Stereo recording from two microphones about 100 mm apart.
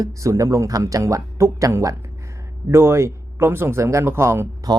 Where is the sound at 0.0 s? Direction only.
35° right (ahead or behind).